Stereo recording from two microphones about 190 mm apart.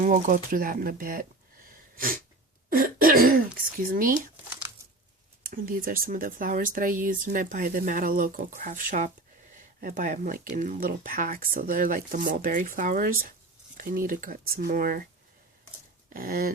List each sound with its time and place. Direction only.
0.0 s speech: 45° right (ahead or behind)
5.4 s speech: 50° right (ahead or behind)
16.1 s speech: 50° right (ahead or behind)